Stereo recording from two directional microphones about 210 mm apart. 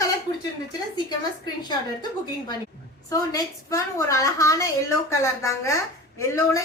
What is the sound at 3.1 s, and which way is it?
A woman's voice, 15° left (ahead or behind).